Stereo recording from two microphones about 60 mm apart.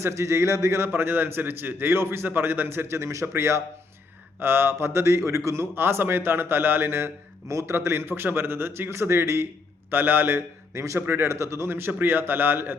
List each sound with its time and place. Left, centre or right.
0.0 s a man's voice: right
4.4 s a man's voice: right
7.4 s a man's voice: right
7.9 s a man's voice: right